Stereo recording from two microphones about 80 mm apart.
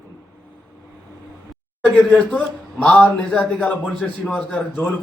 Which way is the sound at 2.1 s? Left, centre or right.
Centre.